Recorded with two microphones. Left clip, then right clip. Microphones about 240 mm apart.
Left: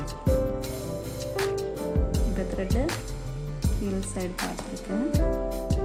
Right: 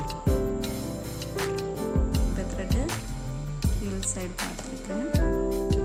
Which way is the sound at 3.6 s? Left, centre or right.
Centre.